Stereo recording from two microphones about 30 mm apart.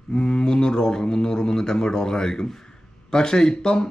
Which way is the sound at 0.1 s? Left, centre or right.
Left.